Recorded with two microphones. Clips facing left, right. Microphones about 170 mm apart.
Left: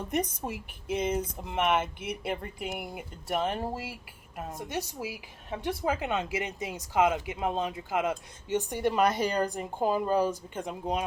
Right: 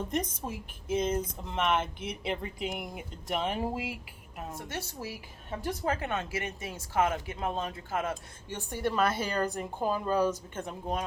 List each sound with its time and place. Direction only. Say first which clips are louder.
0.4 s speech: left 2 dB; 15° left (ahead or behind); by 3.8 s 5° right (ahead or behind)
4.5 s speech: left 5 dB; 15° left (ahead or behind)